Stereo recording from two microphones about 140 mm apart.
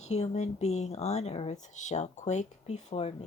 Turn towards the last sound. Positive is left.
turn(degrees=50)  # may be behind; listen again after turning